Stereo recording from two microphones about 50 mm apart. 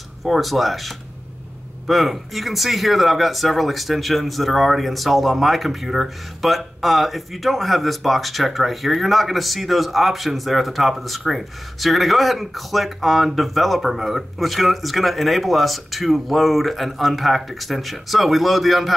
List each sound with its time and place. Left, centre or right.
0.2 s speech: centre